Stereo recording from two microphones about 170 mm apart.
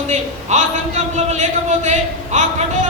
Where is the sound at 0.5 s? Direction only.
45° right (ahead or behind).